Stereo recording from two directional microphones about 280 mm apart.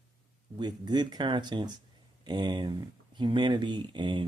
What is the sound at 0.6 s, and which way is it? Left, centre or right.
Speech, centre.